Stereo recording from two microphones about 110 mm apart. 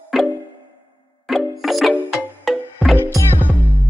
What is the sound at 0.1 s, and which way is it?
Music, centre (ahead or behind).